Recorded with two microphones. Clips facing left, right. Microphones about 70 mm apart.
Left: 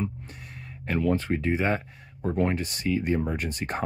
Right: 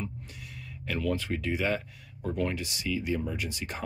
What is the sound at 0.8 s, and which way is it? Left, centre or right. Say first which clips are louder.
Speech: left 5 dB; left.